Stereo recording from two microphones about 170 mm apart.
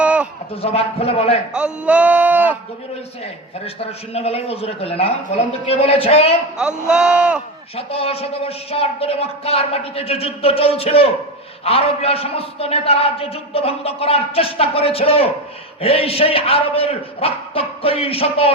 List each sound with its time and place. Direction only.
0.0 s a sound: 5° right (ahead or behind)
0.5 s a man's voice: 35° left (ahead or behind)
1.5 s a sound: 5° right (ahead or behind)
3.6 s a man's voice: 35° left (ahead or behind)
6.6 s speech: 5° right (ahead or behind)
7.8 s a man's voice: 35° left (ahead or behind)